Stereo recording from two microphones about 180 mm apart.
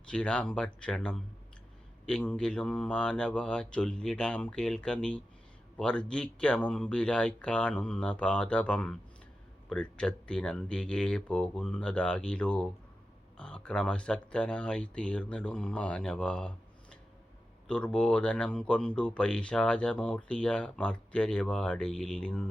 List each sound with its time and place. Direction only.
0.1 s speech: 5° left (ahead or behind)
17.7 s speech: 5° left (ahead or behind)